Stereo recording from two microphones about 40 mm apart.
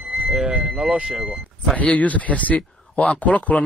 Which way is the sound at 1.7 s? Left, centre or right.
Left.